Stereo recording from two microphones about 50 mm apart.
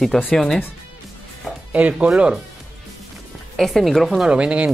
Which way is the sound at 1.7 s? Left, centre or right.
Right.